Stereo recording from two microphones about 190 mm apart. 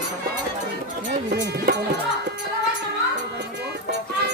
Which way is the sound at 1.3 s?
60° right (ahead or behind).